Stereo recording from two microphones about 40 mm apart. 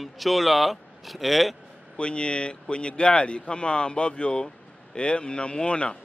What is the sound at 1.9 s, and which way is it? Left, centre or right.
Speech, left.